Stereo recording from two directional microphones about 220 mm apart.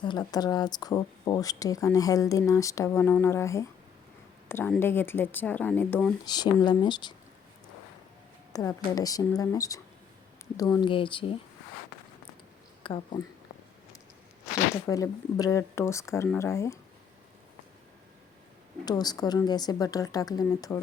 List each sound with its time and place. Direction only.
0.0 s speech: 20° left (ahead or behind)
6.2 s speech: 20° left (ahead or behind)
8.5 s speech: 15° left (ahead or behind)
12.8 s speech: 25° left (ahead or behind)
14.8 s speech: 15° left (ahead or behind)
18.9 s speech: 20° left (ahead or behind)